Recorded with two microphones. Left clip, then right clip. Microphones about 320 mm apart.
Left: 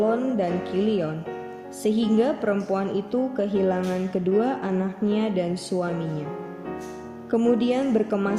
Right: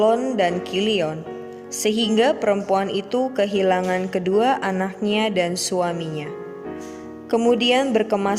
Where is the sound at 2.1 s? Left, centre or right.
Right.